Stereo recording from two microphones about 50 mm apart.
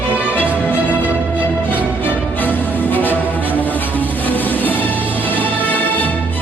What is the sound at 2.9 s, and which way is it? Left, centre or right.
Music, left.